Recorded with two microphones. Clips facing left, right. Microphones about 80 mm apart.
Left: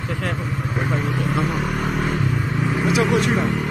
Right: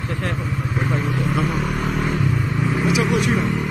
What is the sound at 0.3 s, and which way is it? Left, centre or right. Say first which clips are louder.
Vehicle: even; centre.